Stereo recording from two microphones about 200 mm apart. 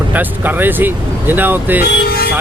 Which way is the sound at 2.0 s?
50° left (ahead or behind).